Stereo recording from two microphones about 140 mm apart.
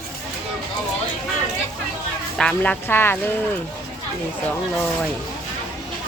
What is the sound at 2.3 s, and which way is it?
Speech, 5° left (ahead or behind).